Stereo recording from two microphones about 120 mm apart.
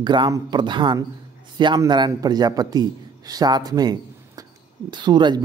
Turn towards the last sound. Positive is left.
turn(degrees=-40)  # may be behind; listen again after turning